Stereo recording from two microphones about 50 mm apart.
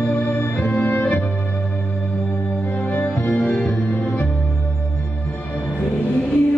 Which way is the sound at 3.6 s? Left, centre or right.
Left.